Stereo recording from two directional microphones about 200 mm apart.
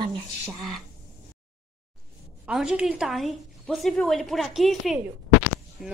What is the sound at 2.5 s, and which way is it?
A woman's voice, 5° right (ahead or behind).